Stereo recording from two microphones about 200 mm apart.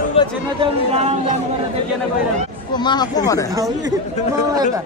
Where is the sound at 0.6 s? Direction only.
30° right (ahead or behind).